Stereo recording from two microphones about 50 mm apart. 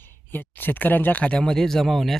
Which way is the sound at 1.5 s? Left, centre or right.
Centre.